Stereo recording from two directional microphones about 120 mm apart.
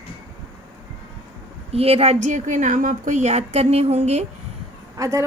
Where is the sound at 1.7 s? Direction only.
55° right (ahead or behind).